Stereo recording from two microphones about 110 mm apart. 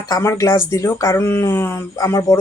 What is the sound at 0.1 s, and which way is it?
Speech, 30° left (ahead or behind).